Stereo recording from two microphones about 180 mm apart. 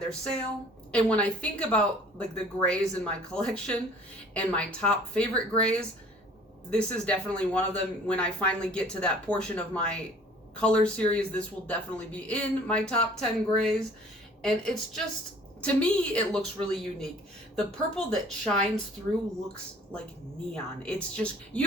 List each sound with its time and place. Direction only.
0.9 s speech: 5° left (ahead or behind)
20.5 s speech: 5° left (ahead or behind)